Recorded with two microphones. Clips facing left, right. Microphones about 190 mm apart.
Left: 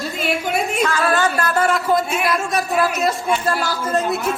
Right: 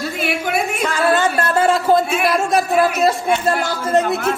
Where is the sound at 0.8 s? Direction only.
20° right (ahead or behind).